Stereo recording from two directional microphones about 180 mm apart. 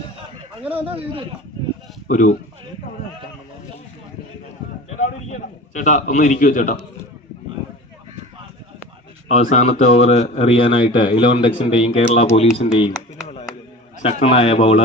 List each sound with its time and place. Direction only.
0.9 s speech: 30° right (ahead or behind)
2.0 s speech: 45° left (ahead or behind)
5.3 s a man's voice: 45° left (ahead or behind)
9.3 s a man's voice: 40° left (ahead or behind)
12.5 s a sound: 35° left (ahead or behind)
14.0 s a man's voice: 35° left (ahead or behind)